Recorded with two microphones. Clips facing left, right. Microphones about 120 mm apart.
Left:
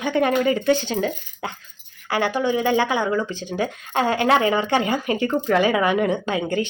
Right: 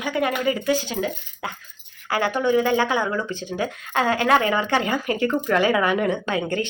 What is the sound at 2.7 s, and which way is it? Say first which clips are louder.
A woman's voice: left 1 dB; 20° left (ahead or behind).